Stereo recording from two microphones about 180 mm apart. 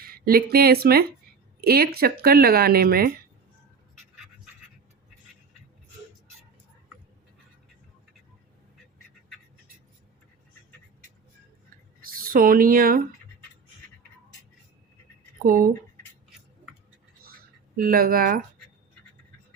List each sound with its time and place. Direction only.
0.0 s speech: 55° right (ahead or behind)
12.0 s speech: 50° right (ahead or behind)
15.4 s speech: 50° right (ahead or behind)
17.7 s speech: 55° right (ahead or behind)